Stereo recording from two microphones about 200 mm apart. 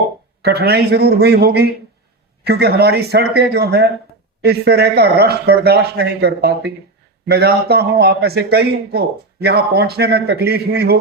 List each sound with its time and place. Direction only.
0.4 s a man's voice: 55° right (ahead or behind)